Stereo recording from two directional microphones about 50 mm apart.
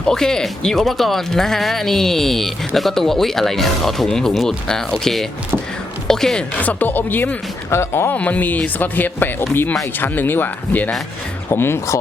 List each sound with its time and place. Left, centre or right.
0.1 s speech: centre
6.6 s speech: left
7.7 s speech: left
8.1 s speech: left
11.5 s speech: left